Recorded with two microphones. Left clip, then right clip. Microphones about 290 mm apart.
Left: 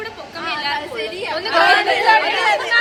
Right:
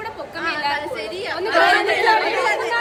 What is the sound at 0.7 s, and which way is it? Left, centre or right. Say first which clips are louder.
Speech: left 2 dB; centre.